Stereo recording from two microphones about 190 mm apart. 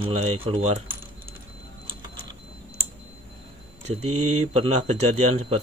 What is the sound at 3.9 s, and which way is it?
Speech, 35° right (ahead or behind).